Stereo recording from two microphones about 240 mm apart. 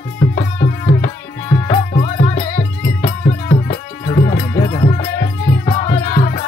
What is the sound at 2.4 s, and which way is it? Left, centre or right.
Music, left.